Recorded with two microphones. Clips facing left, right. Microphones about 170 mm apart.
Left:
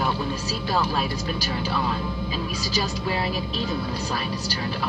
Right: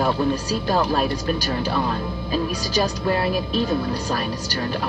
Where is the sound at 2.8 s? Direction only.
50° right (ahead or behind).